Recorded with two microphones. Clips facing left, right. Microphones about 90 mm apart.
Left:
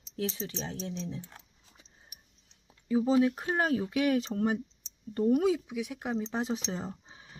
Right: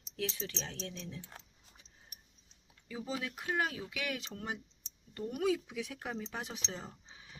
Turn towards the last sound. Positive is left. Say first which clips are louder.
# left 8 dB
turn(degrees=35)  # may be behind; listen again after turning